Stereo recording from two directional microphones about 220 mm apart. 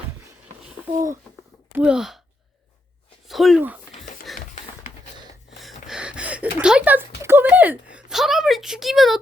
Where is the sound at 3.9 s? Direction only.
35° left (ahead or behind).